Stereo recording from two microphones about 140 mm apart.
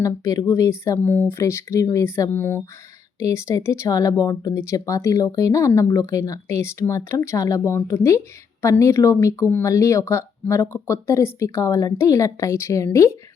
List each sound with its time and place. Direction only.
0.0 s speech: 25° left (ahead or behind)